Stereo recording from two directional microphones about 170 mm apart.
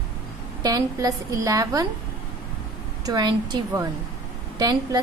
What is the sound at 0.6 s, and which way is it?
A woman's voice, 20° right (ahead or behind).